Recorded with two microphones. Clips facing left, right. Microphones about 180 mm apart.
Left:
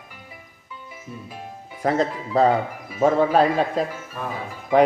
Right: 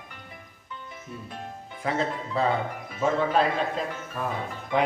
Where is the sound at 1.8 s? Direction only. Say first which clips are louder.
Left 6 dB; 40° left (ahead or behind).